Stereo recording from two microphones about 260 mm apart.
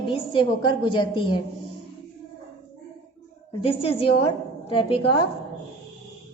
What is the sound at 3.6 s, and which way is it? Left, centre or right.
A woman's voice, left.